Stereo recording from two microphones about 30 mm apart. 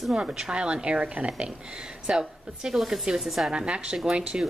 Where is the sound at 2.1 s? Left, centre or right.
Centre.